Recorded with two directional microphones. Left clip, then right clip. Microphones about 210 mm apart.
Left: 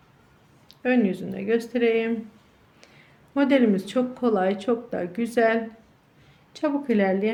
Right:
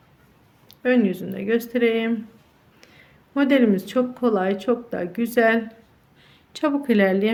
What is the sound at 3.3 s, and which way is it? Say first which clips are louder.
A woman's voice: right 2 dB; 15° right (ahead or behind).